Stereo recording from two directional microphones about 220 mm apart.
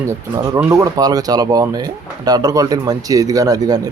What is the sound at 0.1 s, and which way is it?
Speech, 15° right (ahead or behind).